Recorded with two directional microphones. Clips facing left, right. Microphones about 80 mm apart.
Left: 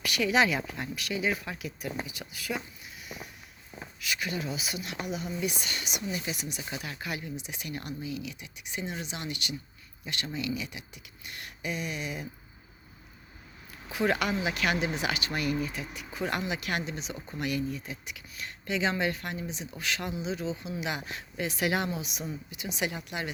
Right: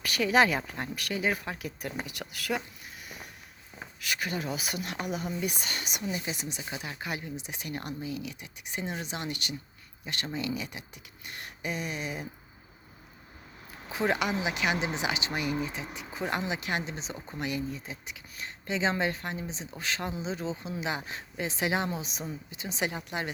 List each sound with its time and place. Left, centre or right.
0.0 s speech: right
2.0 s speech: right
4.0 s speech: right
6.6 s speech: right
13.9 s speech: right